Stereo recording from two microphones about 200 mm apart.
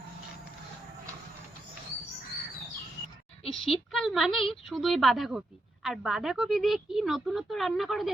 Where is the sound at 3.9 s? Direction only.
Centre (ahead or behind).